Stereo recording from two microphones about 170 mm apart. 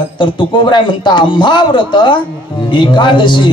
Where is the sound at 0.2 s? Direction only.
30° left (ahead or behind).